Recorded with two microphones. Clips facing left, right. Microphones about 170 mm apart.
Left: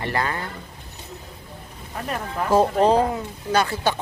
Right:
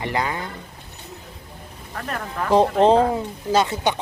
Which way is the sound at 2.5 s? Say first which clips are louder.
Right 2 dB; 20° right (ahead or behind).